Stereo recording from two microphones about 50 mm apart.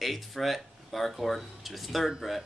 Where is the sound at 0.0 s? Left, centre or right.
Centre.